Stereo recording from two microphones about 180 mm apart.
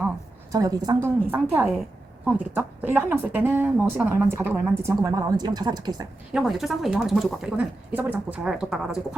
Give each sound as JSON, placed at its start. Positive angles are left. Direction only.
{"t": 0.5, "sound": "a woman's voice", "side_deg": -20}
{"t": 6.3, "sound": "a woman's voice", "side_deg": 0}